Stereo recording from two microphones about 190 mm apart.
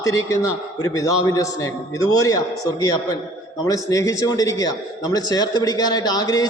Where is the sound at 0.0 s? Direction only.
15° left (ahead or behind).